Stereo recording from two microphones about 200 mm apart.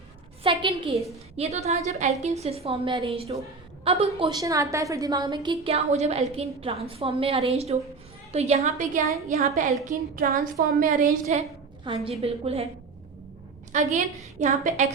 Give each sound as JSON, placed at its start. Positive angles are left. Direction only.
{"t": 0.6, "sound": "a woman's voice", "side_deg": -25}
{"t": 11.9, "sound": "a woman's voice", "side_deg": -25}
{"t": 13.7, "sound": "a woman's voice", "side_deg": -35}